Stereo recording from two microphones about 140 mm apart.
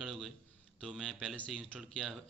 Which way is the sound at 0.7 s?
Centre (ahead or behind).